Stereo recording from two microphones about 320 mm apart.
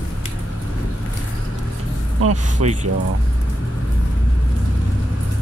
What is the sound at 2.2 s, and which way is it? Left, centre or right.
Speech, right.